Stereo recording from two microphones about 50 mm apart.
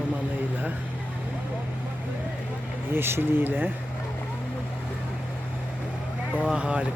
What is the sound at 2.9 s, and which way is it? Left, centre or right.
Speech, right.